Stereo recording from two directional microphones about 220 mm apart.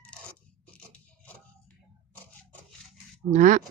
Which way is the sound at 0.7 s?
5° left (ahead or behind).